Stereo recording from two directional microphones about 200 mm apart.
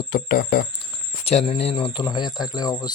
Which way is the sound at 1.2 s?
30° left (ahead or behind).